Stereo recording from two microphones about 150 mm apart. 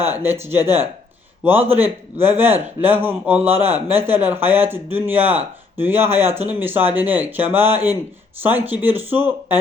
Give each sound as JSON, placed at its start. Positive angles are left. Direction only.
{"t": 0.1, "sound": "speech", "side_deg": -15}